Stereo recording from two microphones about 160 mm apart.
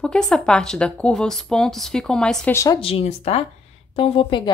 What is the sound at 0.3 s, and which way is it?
Speech, 5° left (ahead or behind).